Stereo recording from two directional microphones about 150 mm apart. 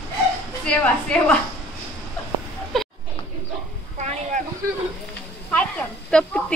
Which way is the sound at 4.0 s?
60° right (ahead or behind).